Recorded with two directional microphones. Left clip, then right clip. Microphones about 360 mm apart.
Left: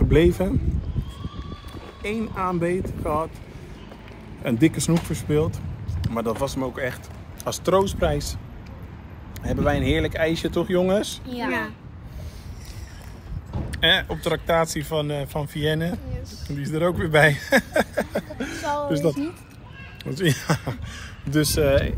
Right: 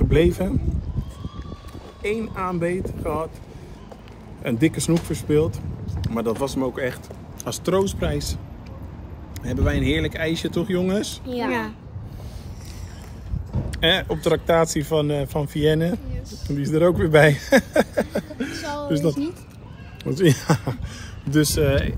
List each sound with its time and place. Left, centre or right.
0.1 s speech: centre
2.0 s speech: centre
4.5 s speech: centre
9.4 s speech: centre
11.2 s speech: right
13.7 s speech: centre
20.0 s speech: centre